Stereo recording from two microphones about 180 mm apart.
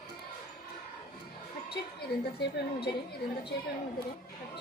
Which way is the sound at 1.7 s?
65° left (ahead or behind).